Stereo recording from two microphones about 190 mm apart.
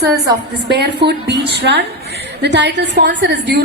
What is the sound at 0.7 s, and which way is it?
A woman's voice, 60° right (ahead or behind).